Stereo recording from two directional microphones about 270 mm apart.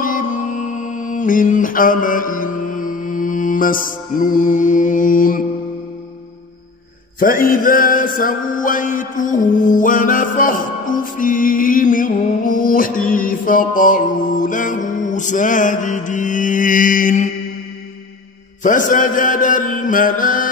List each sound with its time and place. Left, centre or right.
0.0 s music: left
7.2 s mantra: left
18.6 s mantra: left